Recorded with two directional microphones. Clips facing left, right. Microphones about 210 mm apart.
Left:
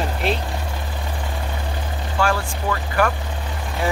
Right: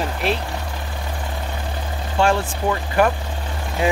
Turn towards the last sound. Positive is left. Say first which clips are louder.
# right 3 dB
turn(degrees=-20)  # may be behind; listen again after turning